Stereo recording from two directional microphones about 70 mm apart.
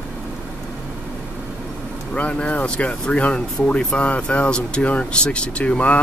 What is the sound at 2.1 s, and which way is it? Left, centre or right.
Speech, centre.